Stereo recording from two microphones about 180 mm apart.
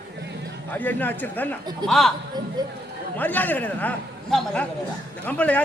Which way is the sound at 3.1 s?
10° left (ahead or behind).